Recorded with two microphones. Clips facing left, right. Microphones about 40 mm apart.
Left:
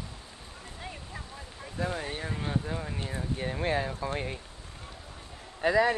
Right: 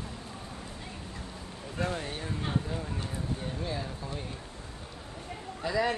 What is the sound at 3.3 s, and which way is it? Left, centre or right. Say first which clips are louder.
Speech: left 8 dB; left.